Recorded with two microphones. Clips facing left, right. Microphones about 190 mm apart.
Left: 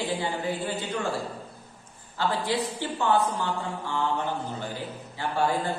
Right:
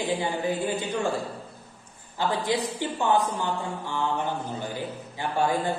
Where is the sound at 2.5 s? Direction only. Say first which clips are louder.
Right 1 dB; 15° right (ahead or behind).